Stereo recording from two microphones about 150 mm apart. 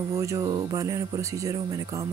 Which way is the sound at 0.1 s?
20° right (ahead or behind).